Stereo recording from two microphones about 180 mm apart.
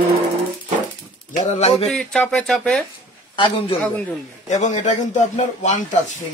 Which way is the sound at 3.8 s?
5° left (ahead or behind).